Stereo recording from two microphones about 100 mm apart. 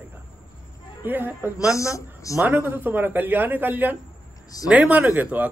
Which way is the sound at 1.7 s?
30° left (ahead or behind).